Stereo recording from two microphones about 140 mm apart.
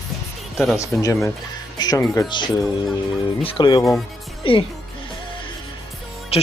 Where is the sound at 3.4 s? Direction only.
40° left (ahead or behind).